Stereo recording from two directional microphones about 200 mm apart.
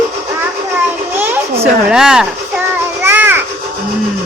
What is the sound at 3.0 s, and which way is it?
Children playing, 10° right (ahead or behind).